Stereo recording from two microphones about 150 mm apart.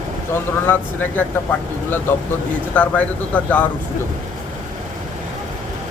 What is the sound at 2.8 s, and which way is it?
Speech, 10° left (ahead or behind).